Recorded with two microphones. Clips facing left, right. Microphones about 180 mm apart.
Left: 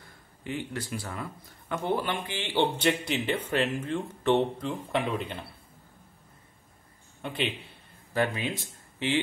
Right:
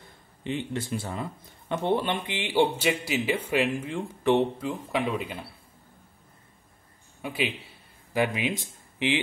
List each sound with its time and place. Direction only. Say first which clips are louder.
0.4 s speech: right 3 dB; 25° right (ahead or behind); by 5.4 s 10° right (ahead or behind)
7.2 s a man's voice: right 2 dB; 5° right (ahead or behind)